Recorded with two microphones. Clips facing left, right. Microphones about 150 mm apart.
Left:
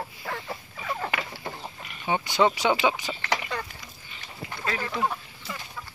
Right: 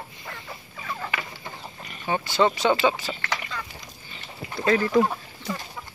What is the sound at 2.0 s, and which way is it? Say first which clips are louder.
Speech: right 1 dB; 15° left (ahead or behind).